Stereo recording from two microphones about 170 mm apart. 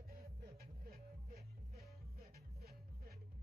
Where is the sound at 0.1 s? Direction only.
60° right (ahead or behind).